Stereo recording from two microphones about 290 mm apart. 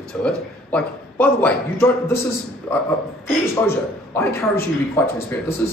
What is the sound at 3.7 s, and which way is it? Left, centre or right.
Speech, centre.